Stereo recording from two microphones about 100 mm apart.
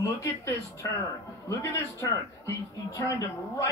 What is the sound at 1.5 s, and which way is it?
Speech, 35° left (ahead or behind).